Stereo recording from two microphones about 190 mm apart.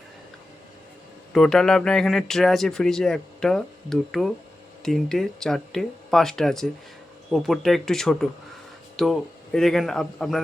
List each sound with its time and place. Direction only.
1.3 s speech: centre (ahead or behind)